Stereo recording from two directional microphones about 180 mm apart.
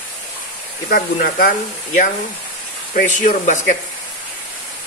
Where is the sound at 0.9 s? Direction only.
55° left (ahead or behind).